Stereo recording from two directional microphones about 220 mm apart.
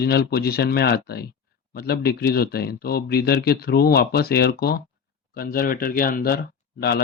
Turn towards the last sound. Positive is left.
turn(degrees=45)  # may be behind; listen again after turning